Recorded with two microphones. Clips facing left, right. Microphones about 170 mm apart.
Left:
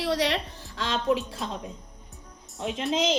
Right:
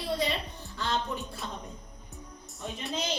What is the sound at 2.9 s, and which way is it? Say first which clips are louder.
Speech: left 8 dB; 90° left.